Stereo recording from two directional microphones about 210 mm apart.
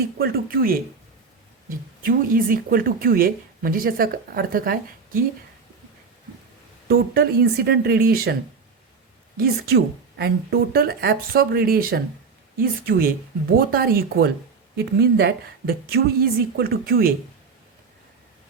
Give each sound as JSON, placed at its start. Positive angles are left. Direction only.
{"t": 0.2, "sound": "speech", "side_deg": -45}
{"t": 2.0, "sound": "speech", "side_deg": -40}
{"t": 6.8, "sound": "speech", "side_deg": -50}
{"t": 9.4, "sound": "speech", "side_deg": -50}